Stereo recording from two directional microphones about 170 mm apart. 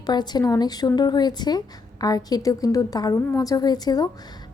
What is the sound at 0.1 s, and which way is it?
A woman's voice, 25° left (ahead or behind).